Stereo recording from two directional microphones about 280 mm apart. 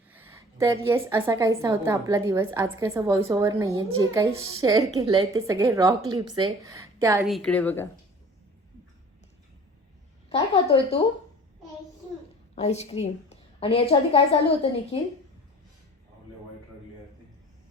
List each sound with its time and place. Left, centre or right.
0.1 s a woman's voice: centre
7.2 s a woman's voice: centre
10.2 s speech: centre
12.5 s a woman's voice: left